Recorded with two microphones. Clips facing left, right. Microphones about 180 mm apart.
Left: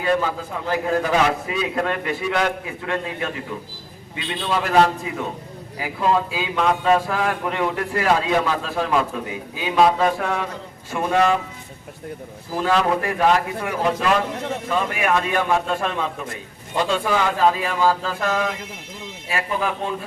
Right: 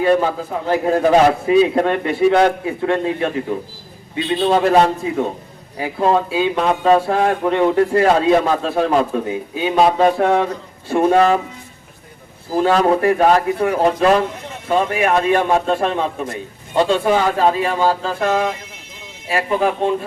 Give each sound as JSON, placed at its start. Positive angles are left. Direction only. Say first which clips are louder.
{"t": 0.0, "sound": "speech", "louder": "right 6 dB", "side_deg": -30}
{"t": 12.5, "sound": "speech", "louder": "right 5 dB", "side_deg": -35}